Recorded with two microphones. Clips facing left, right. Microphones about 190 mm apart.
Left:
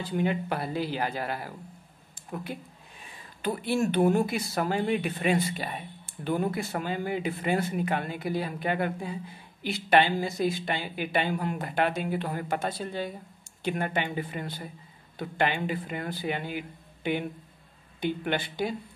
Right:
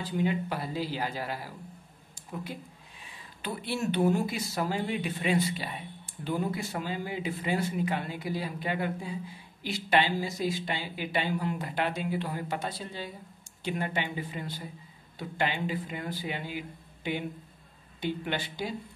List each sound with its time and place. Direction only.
0.2 s speech: 60° left (ahead or behind)
3.4 s speech: 50° left (ahead or behind)